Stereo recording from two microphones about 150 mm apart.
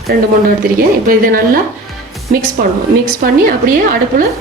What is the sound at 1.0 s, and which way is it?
Speech, 70° right (ahead or behind).